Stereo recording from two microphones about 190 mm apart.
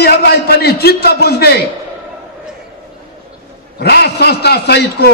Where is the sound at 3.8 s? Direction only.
60° left (ahead or behind).